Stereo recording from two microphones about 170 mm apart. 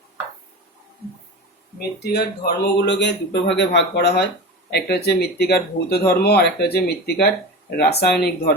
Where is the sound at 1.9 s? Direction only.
70° left (ahead or behind).